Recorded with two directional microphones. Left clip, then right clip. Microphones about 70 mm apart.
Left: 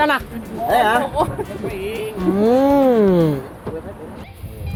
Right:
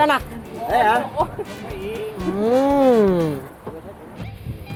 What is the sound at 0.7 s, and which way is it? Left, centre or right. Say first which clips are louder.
Speech: left 1 dB; left.